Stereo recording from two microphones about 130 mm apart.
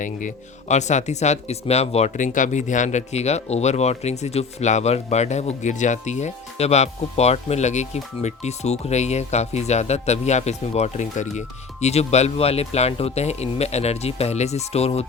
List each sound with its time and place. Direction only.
0.0 s speech: 80° left; by 15.0 s 50° left (ahead or behind)